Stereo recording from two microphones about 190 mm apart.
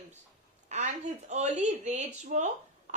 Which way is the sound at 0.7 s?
40° right (ahead or behind).